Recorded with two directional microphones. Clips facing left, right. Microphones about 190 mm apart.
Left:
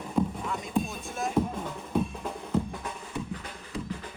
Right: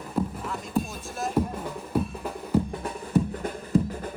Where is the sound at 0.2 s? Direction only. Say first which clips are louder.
Left 1 dB; 5° right (ahead or behind).